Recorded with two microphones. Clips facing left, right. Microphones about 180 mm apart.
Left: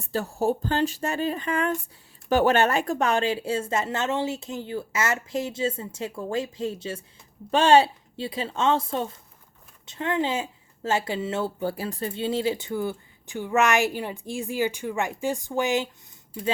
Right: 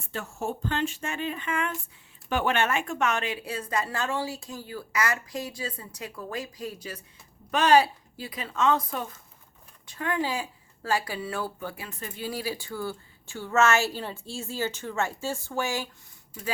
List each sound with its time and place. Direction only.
0.0 s speech: 35° left (ahead or behind); by 15.9 s 20° left (ahead or behind)